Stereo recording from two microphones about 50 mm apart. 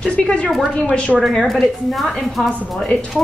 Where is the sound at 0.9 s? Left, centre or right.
Left.